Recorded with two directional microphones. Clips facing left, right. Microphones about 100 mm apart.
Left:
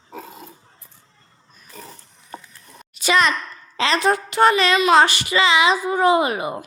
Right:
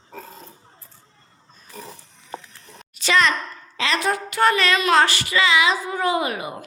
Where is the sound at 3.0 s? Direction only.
15° left (ahead or behind).